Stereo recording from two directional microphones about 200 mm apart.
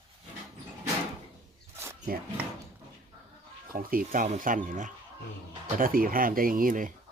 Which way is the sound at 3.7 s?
45° right (ahead or behind).